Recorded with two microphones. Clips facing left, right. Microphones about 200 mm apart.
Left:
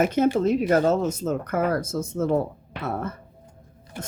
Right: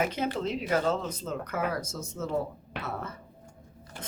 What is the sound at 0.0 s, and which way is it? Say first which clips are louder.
Speech: left 9 dB; 45° left (ahead or behind).